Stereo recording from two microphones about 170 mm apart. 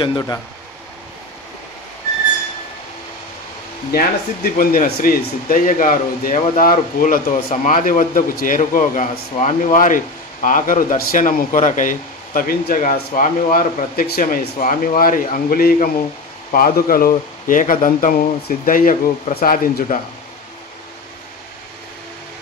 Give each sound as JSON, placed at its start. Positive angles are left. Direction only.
{"t": 0.0, "sound": "speech", "side_deg": 25}
{"t": 3.9, "sound": "a man's voice", "side_deg": 60}